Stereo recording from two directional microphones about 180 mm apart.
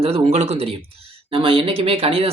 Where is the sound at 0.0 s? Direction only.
35° right (ahead or behind).